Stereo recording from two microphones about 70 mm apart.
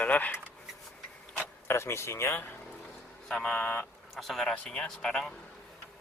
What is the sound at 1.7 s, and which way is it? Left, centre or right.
Speech, left.